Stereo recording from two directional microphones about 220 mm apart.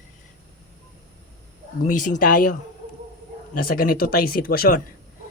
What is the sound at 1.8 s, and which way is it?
Speech, 35° left (ahead or behind).